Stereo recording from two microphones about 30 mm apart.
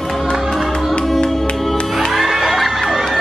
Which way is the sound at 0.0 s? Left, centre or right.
Centre.